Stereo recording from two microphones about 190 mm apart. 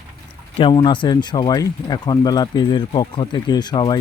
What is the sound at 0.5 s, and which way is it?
Speech, 25° left (ahead or behind).